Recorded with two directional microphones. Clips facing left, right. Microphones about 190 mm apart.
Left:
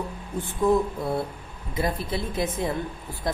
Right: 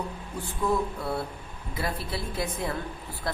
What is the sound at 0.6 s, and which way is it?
Speech, 20° left (ahead or behind).